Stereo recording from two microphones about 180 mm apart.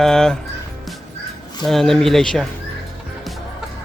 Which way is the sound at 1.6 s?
Centre (ahead or behind).